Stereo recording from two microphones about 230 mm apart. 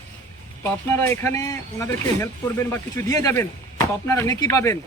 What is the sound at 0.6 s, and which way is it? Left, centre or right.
Speech, centre.